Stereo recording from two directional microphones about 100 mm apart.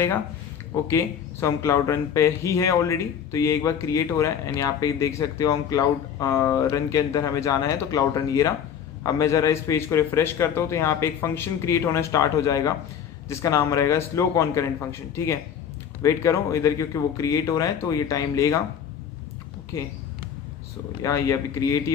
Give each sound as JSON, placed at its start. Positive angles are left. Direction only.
{"t": 0.8, "sound": "a man's voice", "side_deg": 30}
{"t": 21.0, "sound": "speech", "side_deg": 35}